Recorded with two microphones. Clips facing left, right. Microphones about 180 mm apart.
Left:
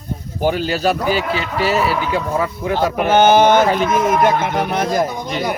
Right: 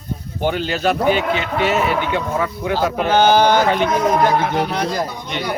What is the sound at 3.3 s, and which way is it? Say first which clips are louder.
Speech: left 3 dB; 20° left (ahead or behind).